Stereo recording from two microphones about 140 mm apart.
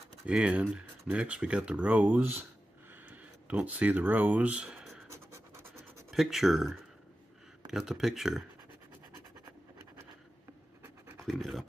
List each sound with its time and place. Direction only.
0.3 s speech: 5° right (ahead or behind)
2.9 s a sound: 10° right (ahead or behind)
5.1 s scratch: 20° right (ahead or behind)
6.0 s speech: centre (ahead or behind)
11.2 s speech: centre (ahead or behind)